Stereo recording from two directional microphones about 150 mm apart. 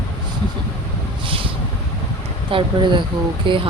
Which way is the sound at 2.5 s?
35° right (ahead or behind).